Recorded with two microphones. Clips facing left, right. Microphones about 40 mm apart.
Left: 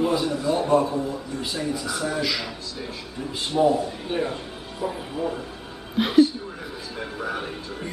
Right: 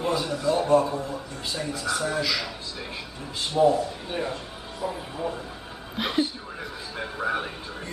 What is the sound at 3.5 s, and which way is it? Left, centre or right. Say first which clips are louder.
A man's voice: even; centre.